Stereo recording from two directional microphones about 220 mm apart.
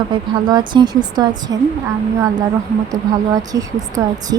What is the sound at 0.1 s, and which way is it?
Speech, 20° right (ahead or behind).